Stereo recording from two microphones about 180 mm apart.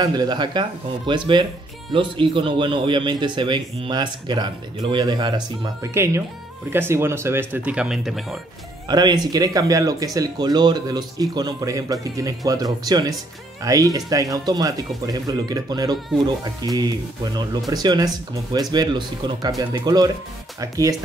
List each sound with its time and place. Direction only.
0.0 s speech: 20° right (ahead or behind); by 8.4 s centre (ahead or behind)
8.8 s speech: 25° right (ahead or behind)